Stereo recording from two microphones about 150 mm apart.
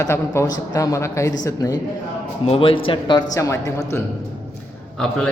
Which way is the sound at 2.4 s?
40° left (ahead or behind).